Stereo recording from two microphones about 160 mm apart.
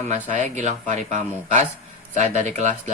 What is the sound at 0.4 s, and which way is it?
Speech, 45° right (ahead or behind).